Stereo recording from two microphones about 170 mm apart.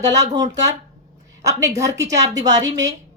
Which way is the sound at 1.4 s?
20° right (ahead or behind).